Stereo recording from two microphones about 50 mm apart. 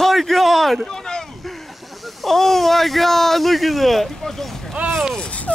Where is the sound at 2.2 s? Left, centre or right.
Centre.